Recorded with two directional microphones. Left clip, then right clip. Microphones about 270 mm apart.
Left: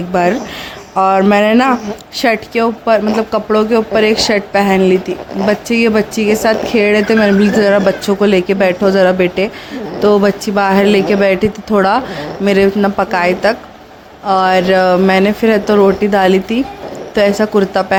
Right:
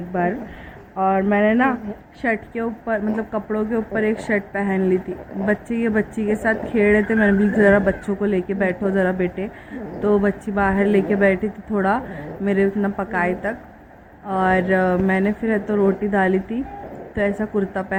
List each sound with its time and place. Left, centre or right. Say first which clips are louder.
0.1 s speech: left 10 dB; left